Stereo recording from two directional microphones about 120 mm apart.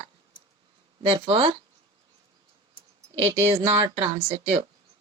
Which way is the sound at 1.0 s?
45° right (ahead or behind).